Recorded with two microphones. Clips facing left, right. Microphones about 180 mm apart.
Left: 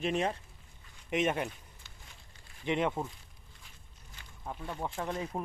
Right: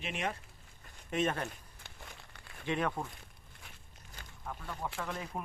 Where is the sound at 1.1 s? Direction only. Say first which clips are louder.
Left 3 dB; 15° left (ahead or behind).